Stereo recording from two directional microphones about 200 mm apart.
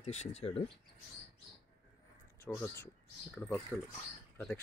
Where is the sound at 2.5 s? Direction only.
5° left (ahead or behind).